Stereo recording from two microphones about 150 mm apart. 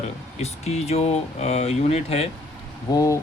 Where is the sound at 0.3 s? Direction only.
45° left (ahead or behind).